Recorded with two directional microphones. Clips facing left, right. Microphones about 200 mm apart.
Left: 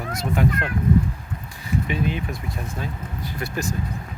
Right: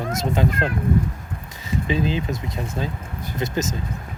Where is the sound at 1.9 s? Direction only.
30° right (ahead or behind).